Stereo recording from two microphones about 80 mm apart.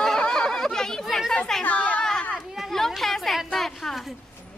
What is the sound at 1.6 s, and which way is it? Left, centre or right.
Speech, centre.